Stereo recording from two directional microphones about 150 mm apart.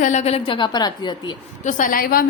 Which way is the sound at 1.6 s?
60° left (ahead or behind).